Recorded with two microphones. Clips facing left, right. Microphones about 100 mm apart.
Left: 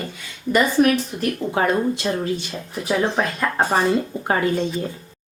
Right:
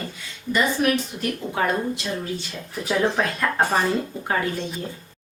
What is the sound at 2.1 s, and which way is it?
Speech, 45° left (ahead or behind).